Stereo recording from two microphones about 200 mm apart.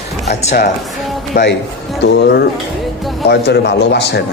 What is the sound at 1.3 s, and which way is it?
A man's voice, 60° left (ahead or behind).